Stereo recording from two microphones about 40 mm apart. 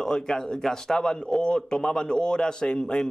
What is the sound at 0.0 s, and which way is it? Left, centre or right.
Speech, centre.